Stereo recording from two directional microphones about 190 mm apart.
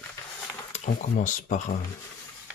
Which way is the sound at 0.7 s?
40° left (ahead or behind).